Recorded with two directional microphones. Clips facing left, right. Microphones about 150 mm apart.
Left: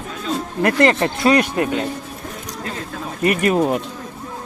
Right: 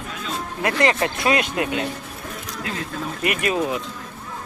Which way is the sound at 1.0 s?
35° left (ahead or behind).